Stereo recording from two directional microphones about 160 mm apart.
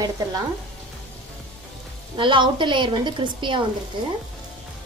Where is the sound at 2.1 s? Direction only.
30° right (ahead or behind).